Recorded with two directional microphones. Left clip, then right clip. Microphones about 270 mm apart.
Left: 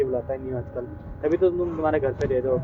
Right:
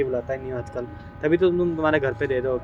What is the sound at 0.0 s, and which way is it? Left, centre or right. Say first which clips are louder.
Speech: even; right.